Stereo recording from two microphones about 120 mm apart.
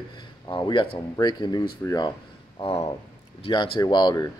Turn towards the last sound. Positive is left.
turn(degrees=40)  # may be behind; listen again after turning